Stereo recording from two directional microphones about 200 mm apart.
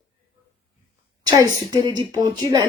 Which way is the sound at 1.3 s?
20° right (ahead or behind).